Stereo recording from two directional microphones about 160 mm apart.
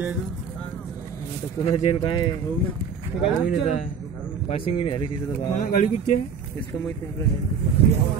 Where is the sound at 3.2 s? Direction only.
35° left (ahead or behind).